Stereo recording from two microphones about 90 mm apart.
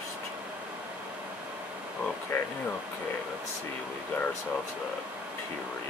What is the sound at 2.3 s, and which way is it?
Speech, 30° left (ahead or behind).